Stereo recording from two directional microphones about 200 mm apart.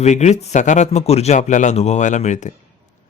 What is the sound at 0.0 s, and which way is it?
Speech, 35° left (ahead or behind).